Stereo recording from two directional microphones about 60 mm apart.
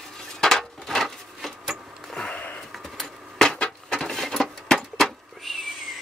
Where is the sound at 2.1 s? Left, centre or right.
Centre.